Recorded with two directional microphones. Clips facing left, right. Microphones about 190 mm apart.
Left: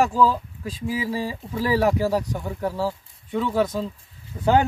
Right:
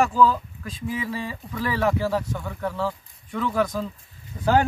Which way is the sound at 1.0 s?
35° left (ahead or behind).